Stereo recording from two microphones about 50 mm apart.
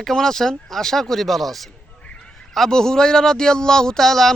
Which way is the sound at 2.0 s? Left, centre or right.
Left.